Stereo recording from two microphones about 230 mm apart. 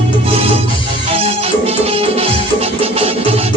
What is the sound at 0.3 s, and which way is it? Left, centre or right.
Music, right.